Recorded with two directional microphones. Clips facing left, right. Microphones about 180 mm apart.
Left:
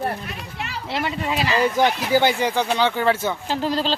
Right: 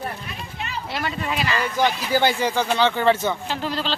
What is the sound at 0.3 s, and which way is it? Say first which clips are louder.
Speech: left 1 dB; 70° left (ahead or behind).